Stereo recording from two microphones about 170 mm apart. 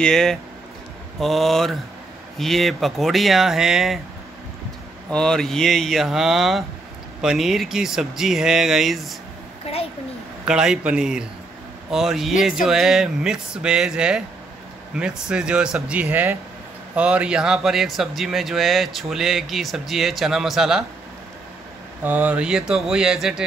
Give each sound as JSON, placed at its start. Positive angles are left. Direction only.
{"t": 0.0, "sound": "speech", "side_deg": 5}
{"t": 5.1, "sound": "speech", "side_deg": 5}
{"t": 9.7, "sound": "a sound", "side_deg": 35}
{"t": 10.4, "sound": "speech", "side_deg": -5}
{"t": 15.2, "sound": "speech", "side_deg": -5}
{"t": 22.0, "sound": "speech", "side_deg": -10}